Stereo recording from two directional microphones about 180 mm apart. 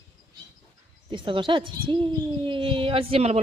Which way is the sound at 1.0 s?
30° right (ahead or behind).